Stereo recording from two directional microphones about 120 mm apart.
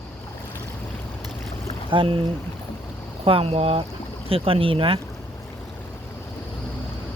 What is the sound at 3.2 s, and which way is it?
Speech, 50° right (ahead or behind).